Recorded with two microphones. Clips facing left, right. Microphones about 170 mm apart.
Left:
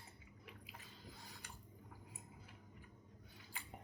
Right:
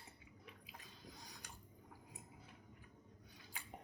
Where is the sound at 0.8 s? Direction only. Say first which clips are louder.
Even; 15° right (ahead or behind).